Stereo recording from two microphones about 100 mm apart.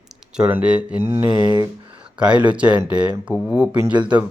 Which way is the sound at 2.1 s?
10° right (ahead or behind).